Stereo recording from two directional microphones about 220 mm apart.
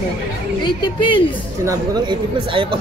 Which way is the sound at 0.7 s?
20° left (ahead or behind).